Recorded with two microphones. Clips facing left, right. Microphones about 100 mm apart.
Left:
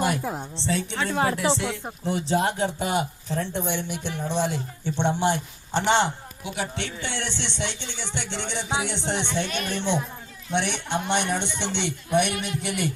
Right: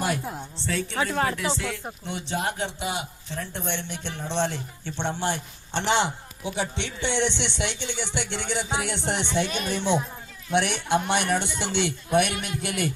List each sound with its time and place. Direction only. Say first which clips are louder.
0.6 s speech: even; 20° left (ahead or behind)
2.0 s speech: left 6 dB; 35° left (ahead or behind)
3.5 s speech: left 4 dB; 15° left (ahead or behind)
6.7 s music: right 4 dB; 20° right (ahead or behind)
11.3 s a man's voice: right 2 dB; 10° right (ahead or behind)